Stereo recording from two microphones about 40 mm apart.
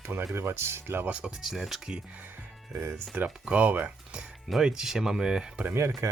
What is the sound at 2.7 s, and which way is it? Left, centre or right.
Speech, right.